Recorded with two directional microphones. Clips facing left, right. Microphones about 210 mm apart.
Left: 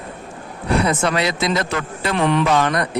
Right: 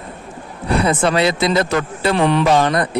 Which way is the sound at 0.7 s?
30° right (ahead or behind).